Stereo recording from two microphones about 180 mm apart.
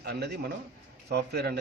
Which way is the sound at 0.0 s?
60° right (ahead or behind).